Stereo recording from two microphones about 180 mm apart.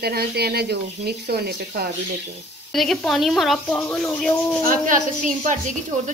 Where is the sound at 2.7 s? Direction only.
Centre (ahead or behind).